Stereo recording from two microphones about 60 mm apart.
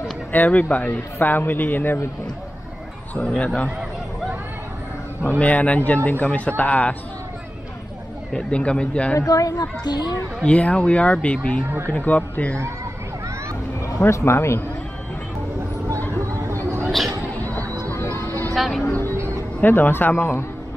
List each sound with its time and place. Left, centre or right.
0.3 s a man's voice: left
3.2 s a man's voice: centre
5.4 s speech: left
8.3 s a man's voice: centre
9.2 s speech: left
10.4 s a man's voice: left
14.0 s speech: left
16.8 s chatter: centre
18.5 s speech: centre
18.9 s a man's voice: left
19.1 s music: right
19.6 s a man's voice: left